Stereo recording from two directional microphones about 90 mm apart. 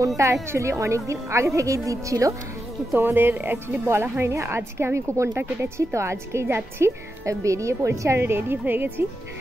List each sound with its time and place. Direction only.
0.2 s a woman's voice: 35° right (ahead or behind)
2.9 s a woman's voice: 25° right (ahead or behind)